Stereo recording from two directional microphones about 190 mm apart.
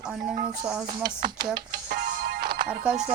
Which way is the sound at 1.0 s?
25° right (ahead or behind).